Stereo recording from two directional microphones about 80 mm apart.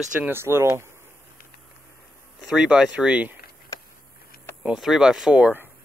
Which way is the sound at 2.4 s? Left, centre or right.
Centre.